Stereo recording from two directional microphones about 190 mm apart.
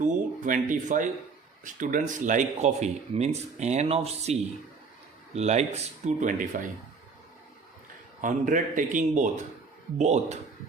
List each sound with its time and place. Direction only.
0.0 s speech: 45° right (ahead or behind)
8.2 s speech: 45° right (ahead or behind)